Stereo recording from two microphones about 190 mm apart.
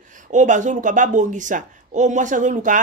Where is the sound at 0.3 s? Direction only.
40° right (ahead or behind).